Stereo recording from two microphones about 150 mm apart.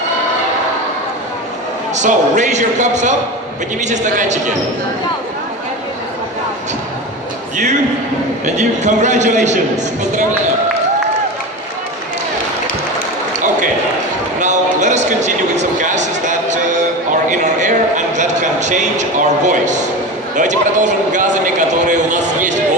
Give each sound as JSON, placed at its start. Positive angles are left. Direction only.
{"t": 2.0, "sound": "a man's voice", "side_deg": -55}
{"t": 7.5, "sound": "a man's voice", "side_deg": -55}
{"t": 14.3, "sound": "a sound", "side_deg": -55}
{"t": 19.5, "sound": "a man's voice", "side_deg": -55}